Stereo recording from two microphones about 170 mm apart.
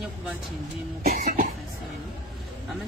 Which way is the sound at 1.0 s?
50° right (ahead or behind).